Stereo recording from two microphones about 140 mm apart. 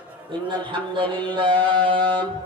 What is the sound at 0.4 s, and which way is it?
Speech, 35° right (ahead or behind).